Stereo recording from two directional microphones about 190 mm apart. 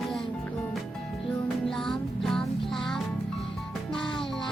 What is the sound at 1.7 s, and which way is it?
Music, centre (ahead or behind).